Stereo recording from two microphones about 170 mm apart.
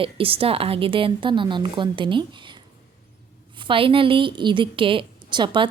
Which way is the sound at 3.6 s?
30° right (ahead or behind).